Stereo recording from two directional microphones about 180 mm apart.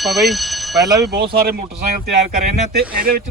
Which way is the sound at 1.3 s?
60° right (ahead or behind).